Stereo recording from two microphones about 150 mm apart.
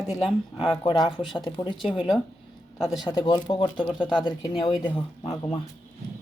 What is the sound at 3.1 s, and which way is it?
Speech, 25° left (ahead or behind).